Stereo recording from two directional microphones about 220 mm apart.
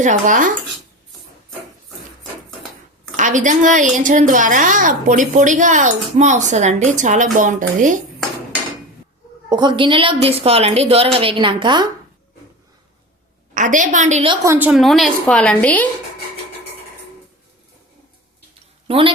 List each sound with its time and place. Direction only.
0.0 s speech: 35° right (ahead or behind)
3.2 s a woman's voice: 35° right (ahead or behind)
9.5 s a woman's voice: 20° right (ahead or behind)
13.5 s speech: 35° right (ahead or behind)
14.4 s a woman's voice: 10° right (ahead or behind); by 15.9 s 5° left (ahead or behind)
18.9 s a woman's voice: 25° right (ahead or behind)